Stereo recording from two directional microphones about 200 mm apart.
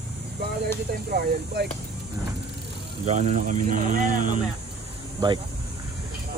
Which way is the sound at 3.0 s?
35° right (ahead or behind).